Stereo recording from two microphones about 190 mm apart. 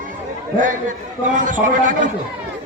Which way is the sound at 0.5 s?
45° right (ahead or behind).